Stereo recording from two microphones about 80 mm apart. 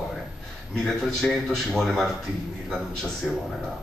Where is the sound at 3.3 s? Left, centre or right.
Centre.